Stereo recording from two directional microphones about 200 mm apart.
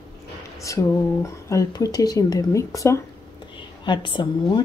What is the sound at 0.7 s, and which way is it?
A woman's voice, 15° left (ahead or behind).